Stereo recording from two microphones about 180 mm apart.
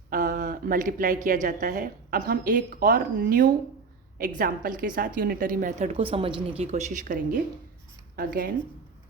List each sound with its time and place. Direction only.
0.1 s a woman's voice: 50° right (ahead or behind)